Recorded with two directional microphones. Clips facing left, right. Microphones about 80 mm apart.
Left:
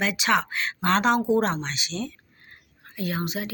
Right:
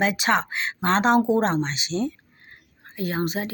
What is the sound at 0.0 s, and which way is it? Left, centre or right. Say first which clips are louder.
Speech: right 2 dB; right.